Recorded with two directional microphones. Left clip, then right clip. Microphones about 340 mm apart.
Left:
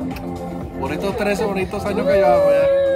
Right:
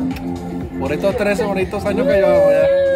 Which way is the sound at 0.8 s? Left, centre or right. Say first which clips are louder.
Right 4 dB; centre.